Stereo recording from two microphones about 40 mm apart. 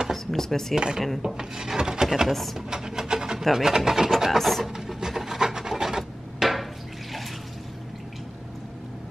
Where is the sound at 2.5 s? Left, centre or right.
Centre.